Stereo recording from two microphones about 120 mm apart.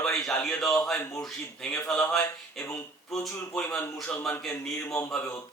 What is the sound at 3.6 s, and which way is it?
A man's voice, 15° left (ahead or behind).